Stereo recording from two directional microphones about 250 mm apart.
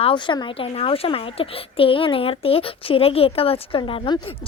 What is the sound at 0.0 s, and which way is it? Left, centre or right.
A woman's voice, centre.